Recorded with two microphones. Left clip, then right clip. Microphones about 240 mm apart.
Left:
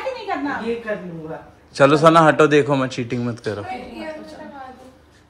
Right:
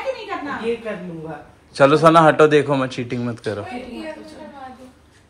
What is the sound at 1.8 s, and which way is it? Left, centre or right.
A man's voice, centre.